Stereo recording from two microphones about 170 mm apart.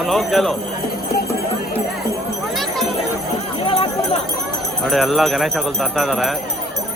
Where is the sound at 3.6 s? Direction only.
35° left (ahead or behind).